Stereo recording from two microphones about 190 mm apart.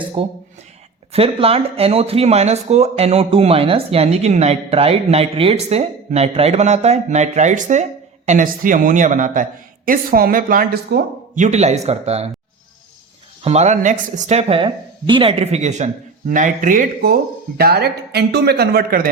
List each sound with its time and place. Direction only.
0.2 s a man's voice: 25° right (ahead or behind)
13.4 s speech: 35° right (ahead or behind); by 19.0 s 55° right (ahead or behind)